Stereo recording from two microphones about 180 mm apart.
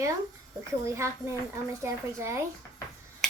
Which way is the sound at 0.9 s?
15° right (ahead or behind).